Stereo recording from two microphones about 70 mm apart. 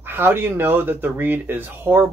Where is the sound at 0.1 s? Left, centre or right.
Right.